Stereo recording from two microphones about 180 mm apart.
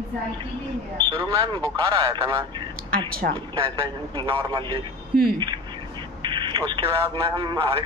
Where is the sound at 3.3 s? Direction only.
30° right (ahead or behind).